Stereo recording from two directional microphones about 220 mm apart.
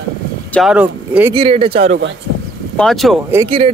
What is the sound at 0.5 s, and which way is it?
Speech, centre (ahead or behind).